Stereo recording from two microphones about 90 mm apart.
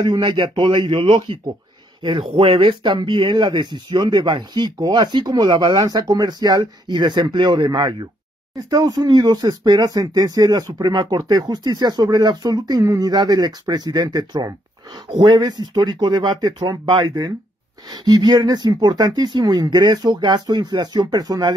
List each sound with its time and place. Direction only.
0.0 s speech: 55° right (ahead or behind)
2.0 s speech: 85° right; by 7.9 s 55° right (ahead or behind)
8.5 s speech: 45° right (ahead or behind)
15.0 s speech: 60° right (ahead or behind)